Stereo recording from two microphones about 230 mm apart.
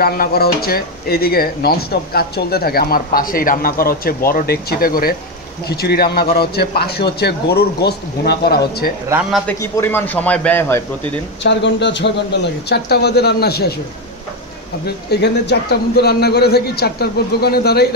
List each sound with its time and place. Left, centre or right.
0.0 s a man's voice: left
9.5 s a man's voice: centre
11.4 s a man's voice: left
14.9 s a man's voice: left